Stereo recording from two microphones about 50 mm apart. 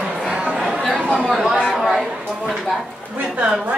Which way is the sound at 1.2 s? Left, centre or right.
Centre.